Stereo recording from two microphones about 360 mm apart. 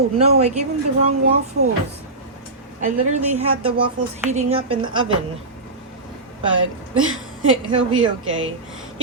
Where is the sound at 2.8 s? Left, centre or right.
Centre.